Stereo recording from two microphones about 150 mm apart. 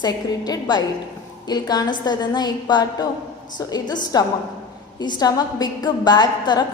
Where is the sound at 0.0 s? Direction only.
25° left (ahead or behind).